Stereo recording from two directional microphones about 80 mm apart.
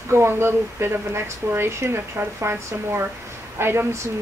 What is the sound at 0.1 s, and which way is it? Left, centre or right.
Speech, right.